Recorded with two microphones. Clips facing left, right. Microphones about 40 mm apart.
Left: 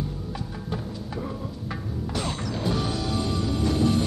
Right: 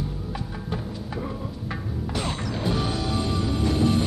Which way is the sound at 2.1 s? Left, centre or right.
Right.